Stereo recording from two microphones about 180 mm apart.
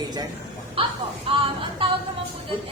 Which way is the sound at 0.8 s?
30° right (ahead or behind).